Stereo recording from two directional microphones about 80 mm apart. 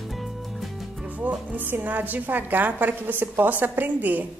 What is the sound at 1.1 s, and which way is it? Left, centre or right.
A woman's voice, centre.